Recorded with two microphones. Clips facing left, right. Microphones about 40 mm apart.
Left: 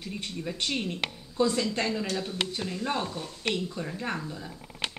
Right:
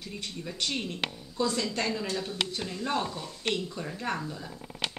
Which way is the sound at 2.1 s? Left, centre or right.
Centre.